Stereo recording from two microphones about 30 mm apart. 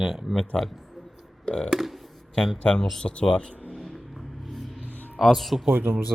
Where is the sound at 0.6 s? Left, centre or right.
Centre.